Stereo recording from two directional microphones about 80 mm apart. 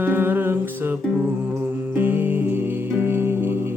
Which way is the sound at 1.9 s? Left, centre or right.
Right.